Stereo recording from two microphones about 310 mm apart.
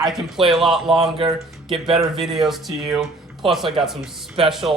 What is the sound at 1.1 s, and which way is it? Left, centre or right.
Speech, centre.